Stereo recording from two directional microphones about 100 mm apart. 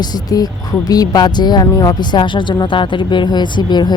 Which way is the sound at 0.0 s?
40° left (ahead or behind).